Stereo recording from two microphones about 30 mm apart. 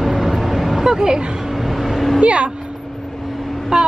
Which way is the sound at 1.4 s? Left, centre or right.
Centre.